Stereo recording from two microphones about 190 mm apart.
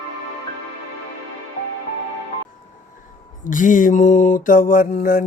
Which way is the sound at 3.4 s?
45° left (ahead or behind).